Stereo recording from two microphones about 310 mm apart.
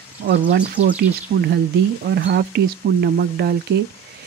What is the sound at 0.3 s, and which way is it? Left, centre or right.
Speech, right.